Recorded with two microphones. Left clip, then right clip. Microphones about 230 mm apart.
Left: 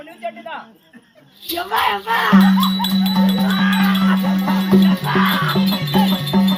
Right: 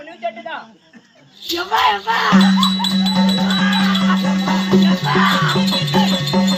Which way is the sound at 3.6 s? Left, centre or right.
Centre.